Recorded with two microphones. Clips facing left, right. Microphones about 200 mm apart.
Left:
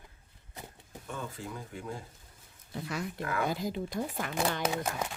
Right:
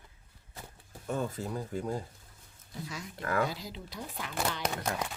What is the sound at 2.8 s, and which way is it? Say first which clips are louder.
Speech: left 3 dB; 60° left (ahead or behind).